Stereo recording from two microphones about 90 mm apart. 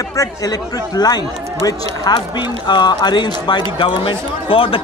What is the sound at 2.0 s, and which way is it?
Speech, 55° left (ahead or behind).